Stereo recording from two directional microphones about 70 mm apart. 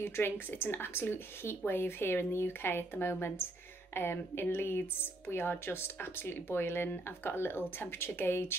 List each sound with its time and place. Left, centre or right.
0.0 s speech: left